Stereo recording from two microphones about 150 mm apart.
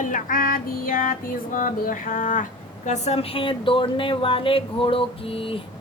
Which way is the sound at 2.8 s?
50° left (ahead or behind).